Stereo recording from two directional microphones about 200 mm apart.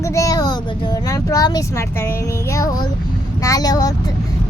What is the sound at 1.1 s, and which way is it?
A child's voice, 20° left (ahead or behind).